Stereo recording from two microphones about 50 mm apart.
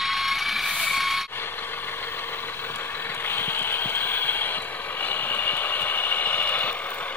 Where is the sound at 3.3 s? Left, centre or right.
Left.